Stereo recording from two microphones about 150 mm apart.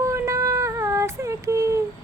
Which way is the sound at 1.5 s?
20° right (ahead or behind).